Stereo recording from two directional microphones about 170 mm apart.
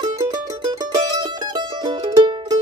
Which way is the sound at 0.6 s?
25° right (ahead or behind).